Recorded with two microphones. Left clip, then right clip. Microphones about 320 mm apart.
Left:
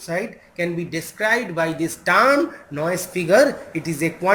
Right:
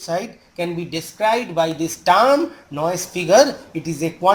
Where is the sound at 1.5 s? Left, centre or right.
Centre.